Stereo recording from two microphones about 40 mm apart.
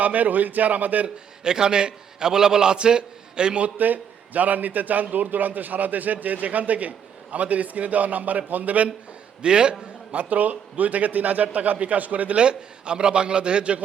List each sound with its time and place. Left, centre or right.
0.0 s a man's voice: right
1.0 s a man's voice: centre
3.8 s a man's voice: right
9.4 s a man's voice: right
10.1 s a man's voice: right
12.4 s a man's voice: right